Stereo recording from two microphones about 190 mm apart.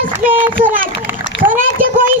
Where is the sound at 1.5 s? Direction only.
45° right (ahead or behind).